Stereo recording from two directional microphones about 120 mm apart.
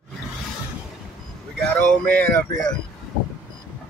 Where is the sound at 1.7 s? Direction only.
15° left (ahead or behind).